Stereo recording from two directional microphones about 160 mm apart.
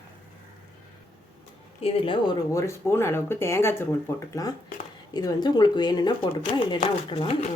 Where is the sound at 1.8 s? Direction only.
30° left (ahead or behind).